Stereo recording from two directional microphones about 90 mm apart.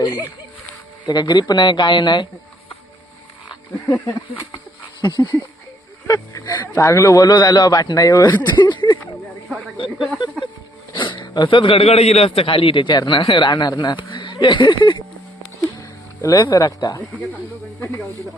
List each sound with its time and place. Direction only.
0.0 s music: 50° left (ahead or behind)
1.0 s a man's voice: 50° left (ahead or behind)
4.9 s speech: 55° left (ahead or behind)
6.1 s speech: 40° left (ahead or behind)
6.5 s speech: 25° left (ahead or behind); by 8.4 s 50° left (ahead or behind)
8.4 s a sound: 55° left (ahead or behind)
10.9 s a man's voice: 65° left (ahead or behind)
15.6 s a sound: 35° left (ahead or behind)